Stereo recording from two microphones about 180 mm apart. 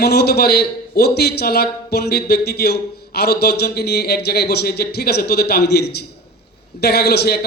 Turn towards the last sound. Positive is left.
turn(degrees=60)  # may be behind; listen again after turning